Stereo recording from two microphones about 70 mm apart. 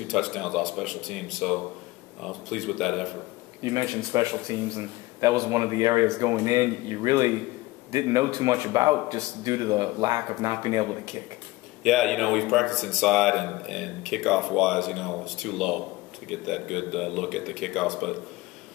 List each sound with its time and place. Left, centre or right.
0.1 s a man's voice: centre
3.6 s speech: right
11.8 s a man's voice: centre